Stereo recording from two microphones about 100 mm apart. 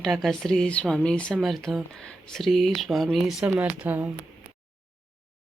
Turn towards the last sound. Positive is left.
turn(degrees=-20)  # may be behind; listen again after turning